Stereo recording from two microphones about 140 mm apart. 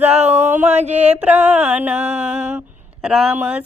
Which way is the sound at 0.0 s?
50° right (ahead or behind).